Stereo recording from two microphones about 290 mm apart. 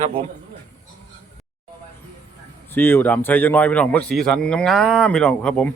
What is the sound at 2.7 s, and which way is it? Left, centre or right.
Speech, centre.